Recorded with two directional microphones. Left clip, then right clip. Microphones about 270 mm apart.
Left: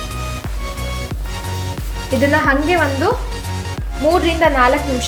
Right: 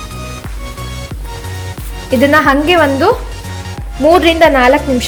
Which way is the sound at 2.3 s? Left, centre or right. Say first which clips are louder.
Right 6 dB; right.